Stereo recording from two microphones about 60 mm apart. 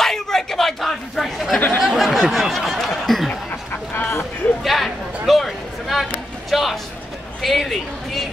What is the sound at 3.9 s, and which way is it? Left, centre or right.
Speech, left.